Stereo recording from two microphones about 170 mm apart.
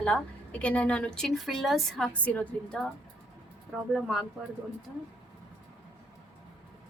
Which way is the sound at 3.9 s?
Centre (ahead or behind).